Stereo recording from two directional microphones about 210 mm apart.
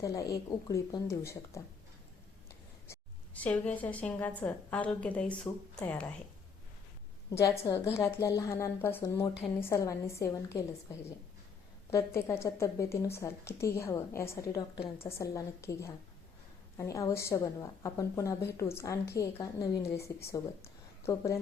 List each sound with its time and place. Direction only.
0.0 s a woman's voice: 15° left (ahead or behind)
2.8 s a woman's voice: 10° left (ahead or behind)
7.3 s a woman's voice: 15° left (ahead or behind)
11.9 s a woman's voice: 15° left (ahead or behind)